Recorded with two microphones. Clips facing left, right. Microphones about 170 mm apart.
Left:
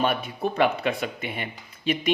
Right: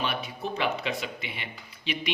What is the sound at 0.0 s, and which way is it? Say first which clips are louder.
A man's voice: left 7 dB; 50° left (ahead or behind).